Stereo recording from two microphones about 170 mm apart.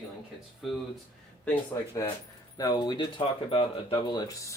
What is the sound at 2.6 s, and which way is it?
Speech, 25° left (ahead or behind).